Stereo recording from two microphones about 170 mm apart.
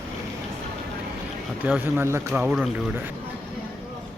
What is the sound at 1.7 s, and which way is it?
Speech, 10° right (ahead or behind).